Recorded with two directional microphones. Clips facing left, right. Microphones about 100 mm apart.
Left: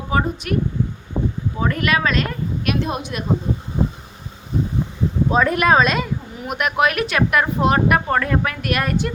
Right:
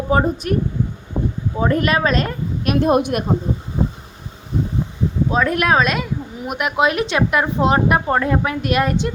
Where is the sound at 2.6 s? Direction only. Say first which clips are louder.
Right 9 dB; 45° right (ahead or behind).